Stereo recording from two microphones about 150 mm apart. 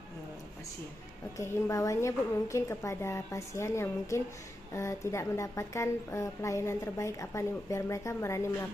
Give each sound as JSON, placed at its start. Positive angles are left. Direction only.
{"t": 1.4, "sound": "a woman's voice", "side_deg": 20}